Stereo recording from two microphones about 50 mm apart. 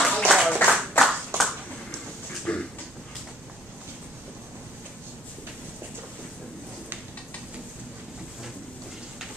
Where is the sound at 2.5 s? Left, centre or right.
Left.